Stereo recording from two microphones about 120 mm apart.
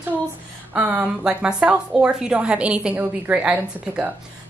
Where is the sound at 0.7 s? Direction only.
10° right (ahead or behind).